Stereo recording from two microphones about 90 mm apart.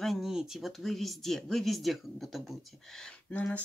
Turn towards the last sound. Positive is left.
turn(degrees=15)  # may be behind; listen again after turning